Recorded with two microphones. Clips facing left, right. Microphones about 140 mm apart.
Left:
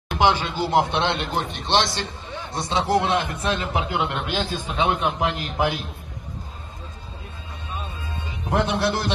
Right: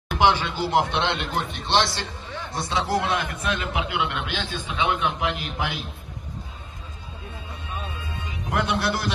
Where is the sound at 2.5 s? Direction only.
25° left (ahead or behind); by 5.8 s 45° left (ahead or behind).